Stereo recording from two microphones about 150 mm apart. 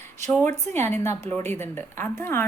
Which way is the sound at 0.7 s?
15° left (ahead or behind).